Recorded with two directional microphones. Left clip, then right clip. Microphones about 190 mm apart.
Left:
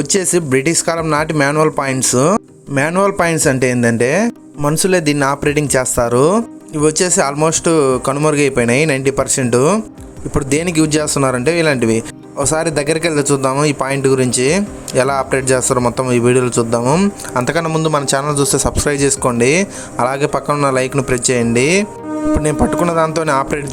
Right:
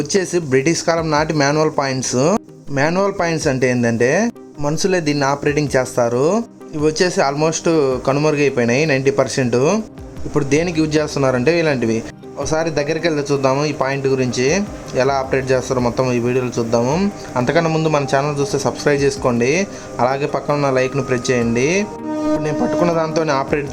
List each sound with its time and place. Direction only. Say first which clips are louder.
0.0 s speech: left 2 dB; 30° left (ahead or behind)